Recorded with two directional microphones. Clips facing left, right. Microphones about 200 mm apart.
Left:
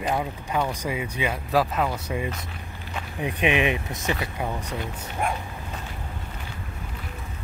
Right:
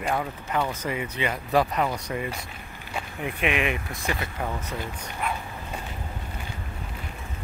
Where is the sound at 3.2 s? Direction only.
20° left (ahead or behind).